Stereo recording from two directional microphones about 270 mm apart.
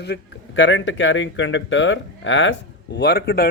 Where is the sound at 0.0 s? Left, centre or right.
Left.